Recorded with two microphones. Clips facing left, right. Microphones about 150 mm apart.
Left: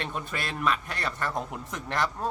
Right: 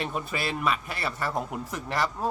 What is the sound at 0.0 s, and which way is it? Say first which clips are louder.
A man's voice: right 3 dB; 5° right (ahead or behind).